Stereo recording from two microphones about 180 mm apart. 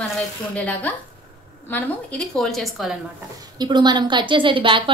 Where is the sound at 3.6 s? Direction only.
25° right (ahead or behind).